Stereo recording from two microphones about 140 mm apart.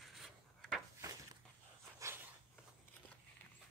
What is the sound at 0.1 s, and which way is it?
Rub, centre (ahead or behind).